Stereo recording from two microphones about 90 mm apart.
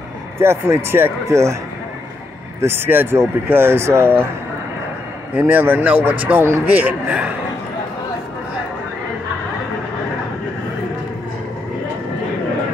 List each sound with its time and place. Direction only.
0.4 s speech: 30° right (ahead or behind)
2.6 s speech: 25° right (ahead or behind)
5.3 s speech: 20° right (ahead or behind)